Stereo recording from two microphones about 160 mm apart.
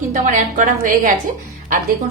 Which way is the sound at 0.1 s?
55° right (ahead or behind).